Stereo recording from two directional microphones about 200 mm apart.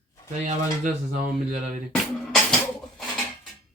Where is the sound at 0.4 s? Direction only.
40° right (ahead or behind).